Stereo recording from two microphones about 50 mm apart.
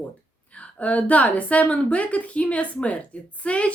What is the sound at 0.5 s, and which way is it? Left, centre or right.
A woman's voice, left.